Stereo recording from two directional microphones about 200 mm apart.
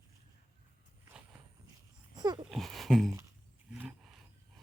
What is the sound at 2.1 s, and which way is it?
Babbling, 20° right (ahead or behind).